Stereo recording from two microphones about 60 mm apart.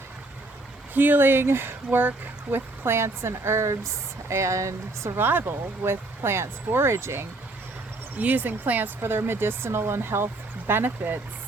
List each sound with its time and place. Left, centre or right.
0.9 s speech: right
2.8 s speech: right
5.1 s speech: right
8.2 s speech: right
9.0 s speech: right